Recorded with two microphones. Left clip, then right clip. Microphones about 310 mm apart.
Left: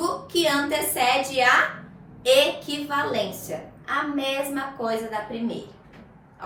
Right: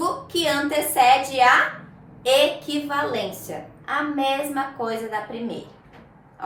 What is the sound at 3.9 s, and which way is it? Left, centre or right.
A woman's voice, centre.